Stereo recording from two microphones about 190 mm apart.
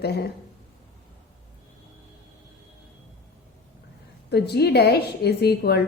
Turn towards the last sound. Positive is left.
turn(degrees=55)  # may be behind; listen again after turning